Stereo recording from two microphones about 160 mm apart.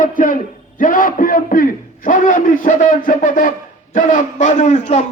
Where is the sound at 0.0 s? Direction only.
55° left (ahead or behind).